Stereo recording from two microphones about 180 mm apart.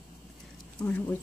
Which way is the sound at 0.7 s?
10° left (ahead or behind).